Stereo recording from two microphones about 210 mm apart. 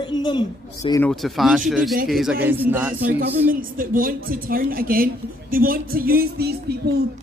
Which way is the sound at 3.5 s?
40° right (ahead or behind).